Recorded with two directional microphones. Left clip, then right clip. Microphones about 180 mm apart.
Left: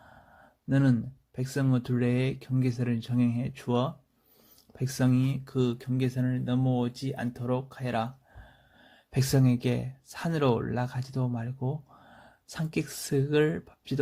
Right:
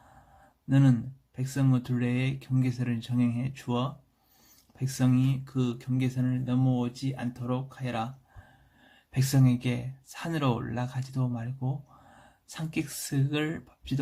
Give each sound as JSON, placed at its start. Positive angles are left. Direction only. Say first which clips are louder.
{"t": 0.7, "sound": "speech", "louder": "right 1 dB", "side_deg": 30}
{"t": 9.1, "sound": "speech", "louder": "left 1 dB", "side_deg": 30}